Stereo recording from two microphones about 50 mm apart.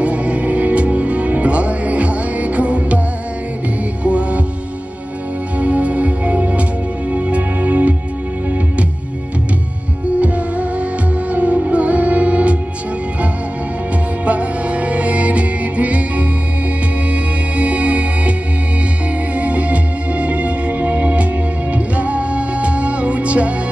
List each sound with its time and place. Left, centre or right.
0.0 s music: right
4.0 s heart sounds: right
5.6 s music: right
10.2 s music: right
14.2 s music: right
19.3 s music: right